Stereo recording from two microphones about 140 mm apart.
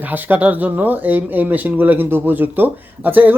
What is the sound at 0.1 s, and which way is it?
Speech, 10° right (ahead or behind).